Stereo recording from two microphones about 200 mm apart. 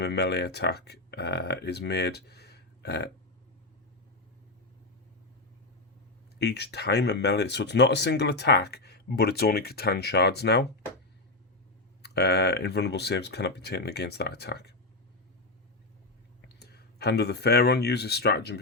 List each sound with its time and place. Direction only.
0.0 s speech: 55° left (ahead or behind)
6.4 s speech: 55° left (ahead or behind)
12.0 s speech: 55° left (ahead or behind)
16.5 s speech: 55° left (ahead or behind)